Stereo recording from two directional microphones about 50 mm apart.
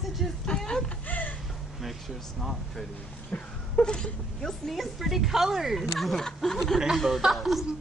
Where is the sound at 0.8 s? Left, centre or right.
Left.